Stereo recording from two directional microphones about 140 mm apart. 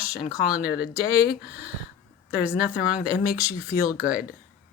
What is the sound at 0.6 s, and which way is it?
Speech, 90° left.